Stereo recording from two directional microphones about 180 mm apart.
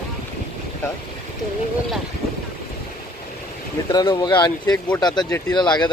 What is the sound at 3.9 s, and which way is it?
Speech, 20° left (ahead or behind).